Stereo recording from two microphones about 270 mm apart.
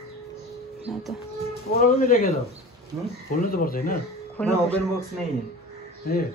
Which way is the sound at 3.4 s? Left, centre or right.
Left.